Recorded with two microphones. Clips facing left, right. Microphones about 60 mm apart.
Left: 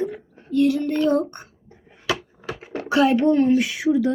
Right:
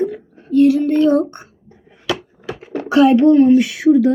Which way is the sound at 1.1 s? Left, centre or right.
Centre.